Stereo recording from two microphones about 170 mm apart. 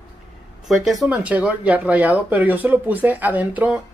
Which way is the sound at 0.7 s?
Centre (ahead or behind).